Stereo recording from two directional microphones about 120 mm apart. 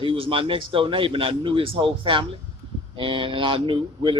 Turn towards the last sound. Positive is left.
turn(degrees=-45)  # may be behind; listen again after turning